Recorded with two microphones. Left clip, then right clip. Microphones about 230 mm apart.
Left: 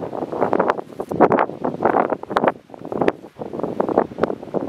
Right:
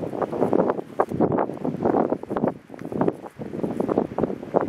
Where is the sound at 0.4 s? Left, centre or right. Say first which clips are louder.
Left 4 dB; centre.